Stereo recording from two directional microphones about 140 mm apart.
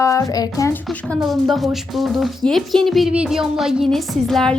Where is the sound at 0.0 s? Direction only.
20° left (ahead or behind).